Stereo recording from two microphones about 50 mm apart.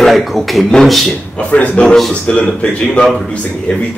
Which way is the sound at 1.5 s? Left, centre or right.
Left.